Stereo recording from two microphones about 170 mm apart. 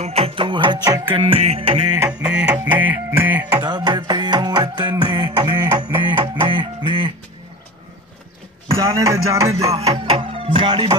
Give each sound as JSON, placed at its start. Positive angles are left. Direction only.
{"t": 0.0, "sound": "music", "side_deg": -35}
{"t": 2.0, "sound": "music", "side_deg": -5}
{"t": 3.6, "sound": "music", "side_deg": -25}
{"t": 8.7, "sound": "music", "side_deg": -20}
{"t": 9.7, "sound": "music", "side_deg": -35}